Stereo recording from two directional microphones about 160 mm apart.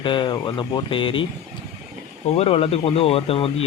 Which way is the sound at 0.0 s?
30° left (ahead or behind).